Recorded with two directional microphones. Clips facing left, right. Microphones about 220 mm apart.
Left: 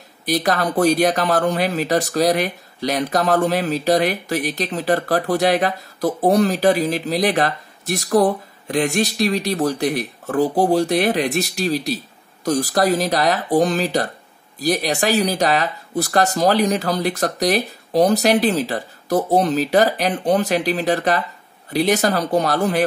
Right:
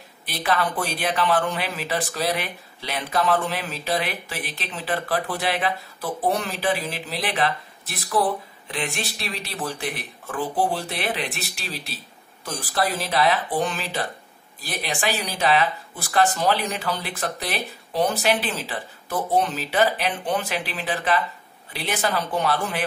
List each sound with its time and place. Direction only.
0.2 s speech: 40° left (ahead or behind)